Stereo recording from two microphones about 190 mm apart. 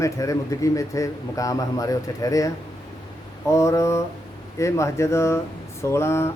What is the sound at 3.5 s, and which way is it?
Speech, 15° left (ahead or behind).